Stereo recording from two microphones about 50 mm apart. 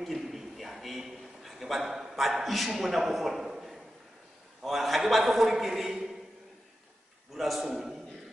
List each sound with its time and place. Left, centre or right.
0.0 s a sound: centre
4.6 s a man's voice: centre
7.3 s a man's voice: centre